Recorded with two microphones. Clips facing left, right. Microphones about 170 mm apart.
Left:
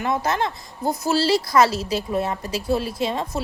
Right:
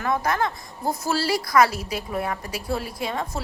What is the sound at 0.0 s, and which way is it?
Speech, 25° left (ahead or behind).